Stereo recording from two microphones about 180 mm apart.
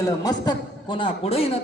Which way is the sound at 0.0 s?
20° left (ahead or behind).